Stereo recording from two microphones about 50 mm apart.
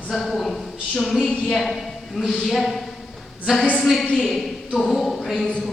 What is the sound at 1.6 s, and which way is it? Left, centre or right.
A woman's voice, centre.